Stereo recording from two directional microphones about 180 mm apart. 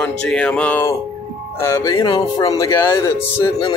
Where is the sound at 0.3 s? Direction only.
5° left (ahead or behind).